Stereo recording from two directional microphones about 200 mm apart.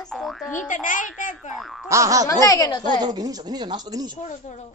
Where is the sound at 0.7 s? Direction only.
40° left (ahead or behind).